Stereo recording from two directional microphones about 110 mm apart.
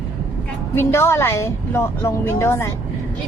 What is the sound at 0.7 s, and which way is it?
Speech, 25° left (ahead or behind).